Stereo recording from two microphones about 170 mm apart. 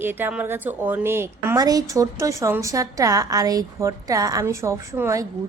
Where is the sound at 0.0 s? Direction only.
10° right (ahead or behind).